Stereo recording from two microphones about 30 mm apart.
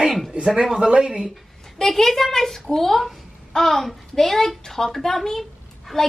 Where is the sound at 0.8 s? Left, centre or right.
Right.